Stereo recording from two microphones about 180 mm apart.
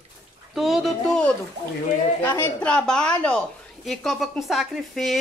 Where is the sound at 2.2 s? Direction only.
15° left (ahead or behind).